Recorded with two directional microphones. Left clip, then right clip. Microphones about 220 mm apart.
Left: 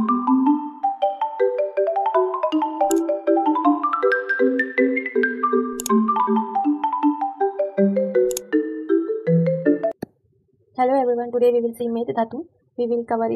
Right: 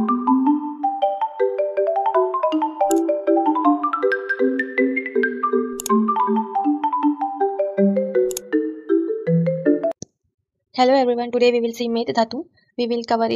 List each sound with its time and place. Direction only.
0.0 s music: centre (ahead or behind)
10.8 s speech: 25° right (ahead or behind)